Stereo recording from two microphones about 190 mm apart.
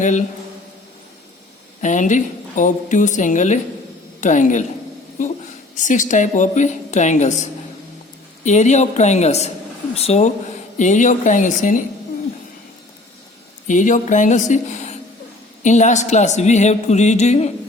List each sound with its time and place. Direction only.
0.0 s a woman's voice: 40° left (ahead or behind)
1.8 s a woman's voice: 40° left (ahead or behind)
8.4 s a woman's voice: 40° left (ahead or behind)
13.7 s a woman's voice: 40° left (ahead or behind)